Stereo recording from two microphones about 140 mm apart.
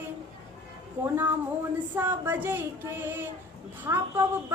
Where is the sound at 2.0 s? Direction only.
15° right (ahead or behind).